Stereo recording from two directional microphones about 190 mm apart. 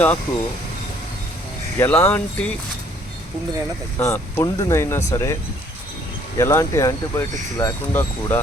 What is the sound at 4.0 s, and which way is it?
Speech, 15° left (ahead or behind).